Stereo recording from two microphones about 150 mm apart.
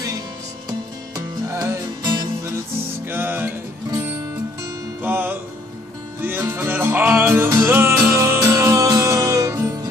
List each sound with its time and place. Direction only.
0.7 s music: 25° right (ahead or behind)